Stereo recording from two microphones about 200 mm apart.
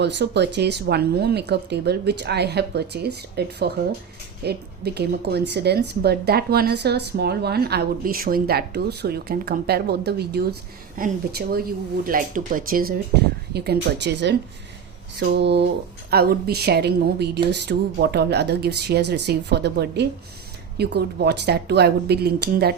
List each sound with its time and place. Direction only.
0.0 s speech: 60° right (ahead or behind)